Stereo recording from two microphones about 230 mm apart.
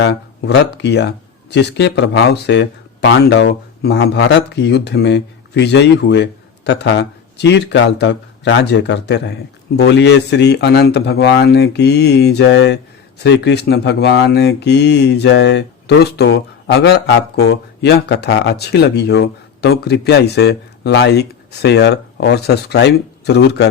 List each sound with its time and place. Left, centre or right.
0.0 s a man's voice: left